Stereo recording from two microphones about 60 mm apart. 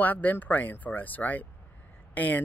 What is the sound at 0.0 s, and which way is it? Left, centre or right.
Speech, left.